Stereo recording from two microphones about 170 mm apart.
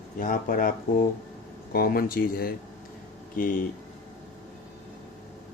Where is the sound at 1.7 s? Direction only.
60° left (ahead or behind).